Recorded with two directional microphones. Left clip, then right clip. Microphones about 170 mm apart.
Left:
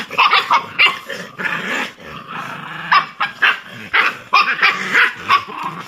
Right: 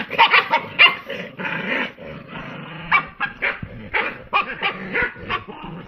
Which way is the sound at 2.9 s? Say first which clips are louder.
Left 5 dB; 15° left (ahead or behind).